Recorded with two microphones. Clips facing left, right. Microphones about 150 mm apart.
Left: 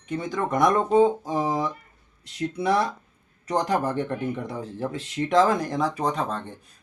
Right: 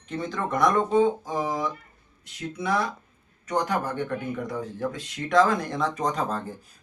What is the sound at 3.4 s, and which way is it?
Speech, 35° left (ahead or behind).